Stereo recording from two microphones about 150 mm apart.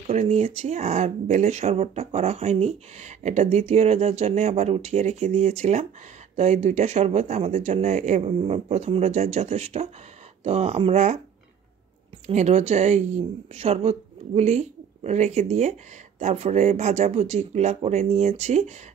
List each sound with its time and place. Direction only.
0.0 s speech: 45° right (ahead or behind)
12.3 s speech: 50° right (ahead or behind)